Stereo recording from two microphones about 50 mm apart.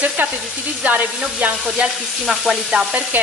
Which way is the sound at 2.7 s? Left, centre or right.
Right.